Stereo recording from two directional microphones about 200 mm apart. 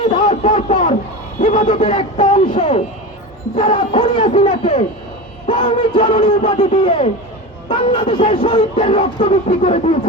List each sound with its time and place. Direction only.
0.0 s a man's voice: 25° left (ahead or behind)
1.4 s a sound: 40° left (ahead or behind)
1.7 s speech: 30° left (ahead or behind)
4.2 s speech: 35° left (ahead or behind)
8.4 s speech: 25° left (ahead or behind)